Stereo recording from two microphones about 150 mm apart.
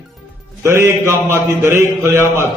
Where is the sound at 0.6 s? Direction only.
15° right (ahead or behind).